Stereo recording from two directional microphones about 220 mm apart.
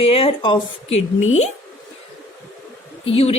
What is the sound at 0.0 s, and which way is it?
Speech, 25° left (ahead or behind).